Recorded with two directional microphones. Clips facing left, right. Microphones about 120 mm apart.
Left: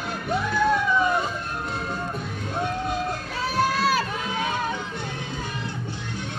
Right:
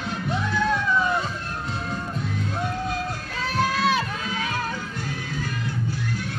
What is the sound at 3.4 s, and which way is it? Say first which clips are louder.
Music: even; 5° left (ahead or behind).